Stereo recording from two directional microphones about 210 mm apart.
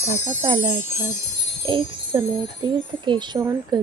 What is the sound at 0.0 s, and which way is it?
Speech, 30° right (ahead or behind).